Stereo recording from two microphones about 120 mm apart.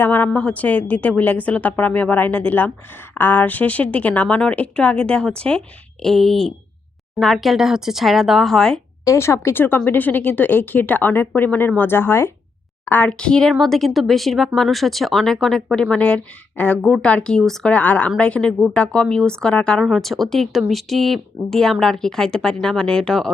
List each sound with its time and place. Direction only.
0.0 s a woman's voice: 15° left (ahead or behind)
9.0 s a woman's voice: 25° left (ahead or behind); by 23.3 s 5° left (ahead or behind)